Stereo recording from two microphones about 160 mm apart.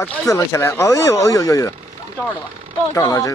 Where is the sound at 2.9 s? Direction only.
20° left (ahead or behind).